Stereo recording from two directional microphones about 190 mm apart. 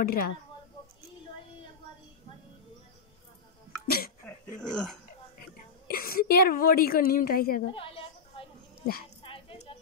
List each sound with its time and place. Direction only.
0.0 s a woman's voice: 50° left (ahead or behind)
3.8 s cough: 50° left (ahead or behind)
4.6 s speech: 5° left (ahead or behind)
5.9 s a woman's voice: 50° left (ahead or behind)
7.7 s a sound: 30° left (ahead or behind)
9.2 s music: 30° left (ahead or behind)